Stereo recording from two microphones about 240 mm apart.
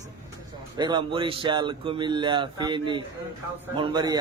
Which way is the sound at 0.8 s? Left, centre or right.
Centre.